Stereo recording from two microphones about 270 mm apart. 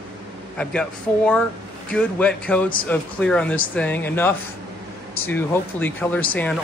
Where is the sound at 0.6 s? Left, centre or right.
Centre.